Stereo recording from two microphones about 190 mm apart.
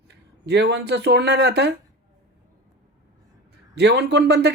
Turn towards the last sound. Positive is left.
turn(degrees=-60)  # may be behind; listen again after turning